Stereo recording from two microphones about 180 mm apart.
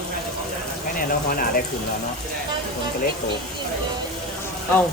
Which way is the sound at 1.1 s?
55° left (ahead or behind).